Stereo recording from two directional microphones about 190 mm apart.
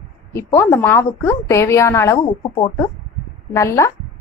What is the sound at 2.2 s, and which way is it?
Speech, 30° left (ahead or behind).